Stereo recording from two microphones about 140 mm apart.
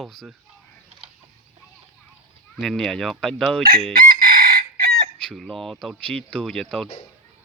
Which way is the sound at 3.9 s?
90° right.